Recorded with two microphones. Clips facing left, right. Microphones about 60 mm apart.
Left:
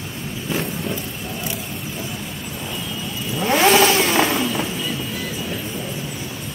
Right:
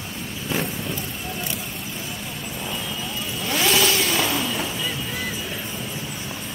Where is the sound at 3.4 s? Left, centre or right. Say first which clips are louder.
Left 7 dB; left.